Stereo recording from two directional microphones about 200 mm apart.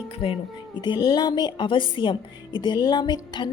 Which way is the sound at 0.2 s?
25° left (ahead or behind).